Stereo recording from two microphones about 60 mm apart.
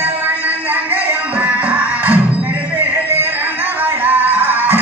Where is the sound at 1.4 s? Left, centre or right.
Right.